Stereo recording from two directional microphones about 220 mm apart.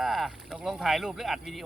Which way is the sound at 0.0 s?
Centre (ahead or behind).